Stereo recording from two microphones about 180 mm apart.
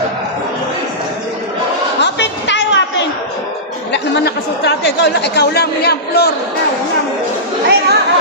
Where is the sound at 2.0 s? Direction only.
75° left (ahead or behind).